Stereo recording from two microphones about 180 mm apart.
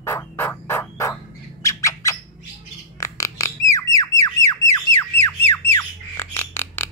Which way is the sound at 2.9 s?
20° left (ahead or behind).